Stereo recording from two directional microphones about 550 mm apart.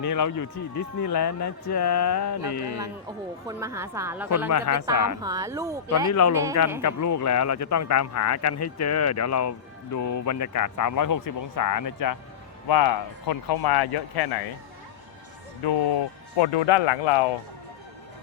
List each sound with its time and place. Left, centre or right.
0.0 s speech: left
3.4 s a woman's voice: centre
4.4 s speech: left
5.2 s a woman's voice: centre
6.1 s speech: left
15.6 s speech: left